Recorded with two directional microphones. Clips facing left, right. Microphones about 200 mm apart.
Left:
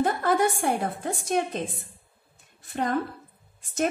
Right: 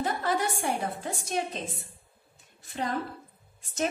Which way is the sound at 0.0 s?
50° left (ahead or behind).